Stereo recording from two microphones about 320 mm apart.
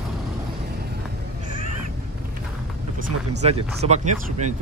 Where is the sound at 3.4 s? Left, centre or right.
Centre.